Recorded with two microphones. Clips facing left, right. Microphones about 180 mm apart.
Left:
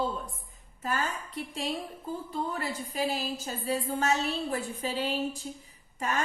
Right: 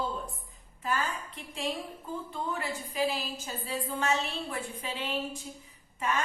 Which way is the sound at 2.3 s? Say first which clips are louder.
Left 2 dB; 40° left (ahead or behind).